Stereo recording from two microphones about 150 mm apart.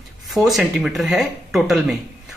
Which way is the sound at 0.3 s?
Centre (ahead or behind).